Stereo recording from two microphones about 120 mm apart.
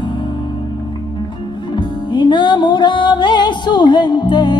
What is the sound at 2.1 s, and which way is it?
Music, 40° left (ahead or behind).